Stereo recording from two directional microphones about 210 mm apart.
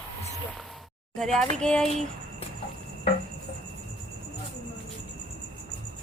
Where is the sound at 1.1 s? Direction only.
Centre (ahead or behind).